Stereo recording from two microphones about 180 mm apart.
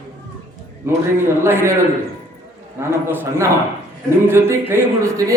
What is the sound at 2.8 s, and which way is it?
A man's voice, 15° right (ahead or behind).